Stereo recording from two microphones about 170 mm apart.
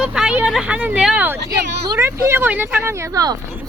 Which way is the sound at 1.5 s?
15° right (ahead or behind).